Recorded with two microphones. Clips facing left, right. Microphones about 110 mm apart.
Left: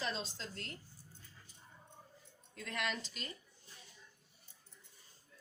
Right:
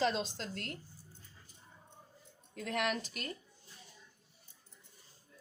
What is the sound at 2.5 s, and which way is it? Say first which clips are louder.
Speech: right 6 dB; 55° right (ahead or behind).